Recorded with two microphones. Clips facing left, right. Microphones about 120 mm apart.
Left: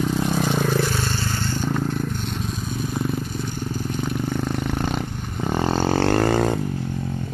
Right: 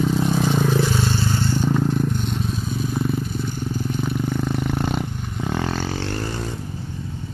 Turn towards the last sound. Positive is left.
turn(degrees=80)